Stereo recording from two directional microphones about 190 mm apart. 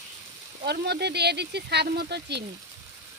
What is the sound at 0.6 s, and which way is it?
Speech, 60° right (ahead or behind).